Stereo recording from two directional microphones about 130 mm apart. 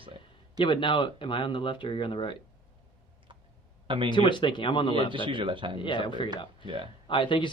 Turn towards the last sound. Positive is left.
turn(degrees=40)  # may be behind; listen again after turning